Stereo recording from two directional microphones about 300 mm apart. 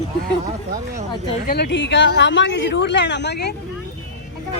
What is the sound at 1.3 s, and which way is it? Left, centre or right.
Speech, left.